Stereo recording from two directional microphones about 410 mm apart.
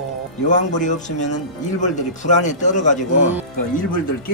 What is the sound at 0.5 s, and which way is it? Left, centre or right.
Speech, centre.